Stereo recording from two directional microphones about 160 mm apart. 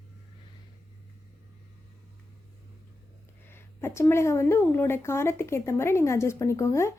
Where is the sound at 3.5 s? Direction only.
15° left (ahead or behind).